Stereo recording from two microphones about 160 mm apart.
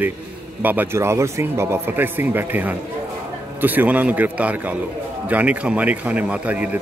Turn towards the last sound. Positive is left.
turn(degrees=-10)  # may be behind; listen again after turning